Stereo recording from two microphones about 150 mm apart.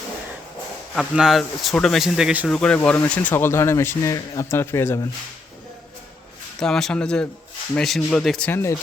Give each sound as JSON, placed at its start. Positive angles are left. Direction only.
{"t": 0.9, "sound": "speech", "side_deg": -5}
{"t": 2.5, "sound": "speech", "side_deg": 5}
{"t": 6.6, "sound": "speech", "side_deg": 5}
{"t": 8.4, "sound": "speech", "side_deg": 15}